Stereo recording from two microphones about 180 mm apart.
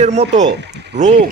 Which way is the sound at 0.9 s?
75° right (ahead or behind).